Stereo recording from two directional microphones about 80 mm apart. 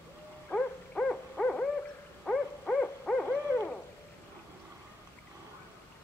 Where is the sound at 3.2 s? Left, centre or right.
Left.